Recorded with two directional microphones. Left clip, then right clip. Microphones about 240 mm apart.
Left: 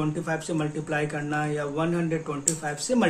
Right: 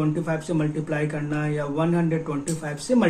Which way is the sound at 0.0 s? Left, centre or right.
Centre.